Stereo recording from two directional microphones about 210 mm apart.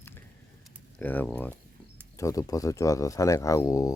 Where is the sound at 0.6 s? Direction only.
Centre (ahead or behind).